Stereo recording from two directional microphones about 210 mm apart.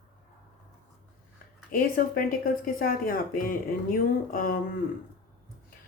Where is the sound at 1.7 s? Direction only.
45° left (ahead or behind).